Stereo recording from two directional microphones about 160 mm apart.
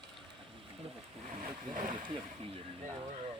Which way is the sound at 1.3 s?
55° right (ahead or behind).